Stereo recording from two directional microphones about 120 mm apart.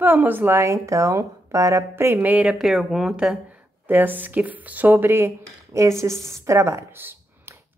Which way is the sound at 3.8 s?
15° right (ahead or behind).